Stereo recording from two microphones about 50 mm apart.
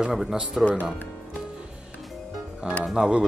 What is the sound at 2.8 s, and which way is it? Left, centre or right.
Speech, centre.